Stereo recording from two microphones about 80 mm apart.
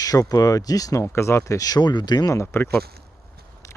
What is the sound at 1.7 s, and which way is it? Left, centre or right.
Speech, left.